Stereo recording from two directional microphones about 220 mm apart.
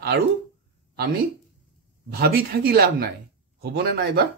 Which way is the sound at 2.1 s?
45° right (ahead or behind).